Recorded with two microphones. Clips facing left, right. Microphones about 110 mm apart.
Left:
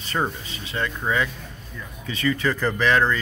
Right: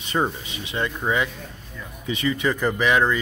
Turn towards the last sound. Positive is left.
turn(degrees=-15)  # may be behind; listen again after turning